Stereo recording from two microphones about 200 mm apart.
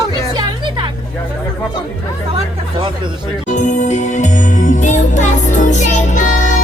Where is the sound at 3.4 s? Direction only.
35° left (ahead or behind).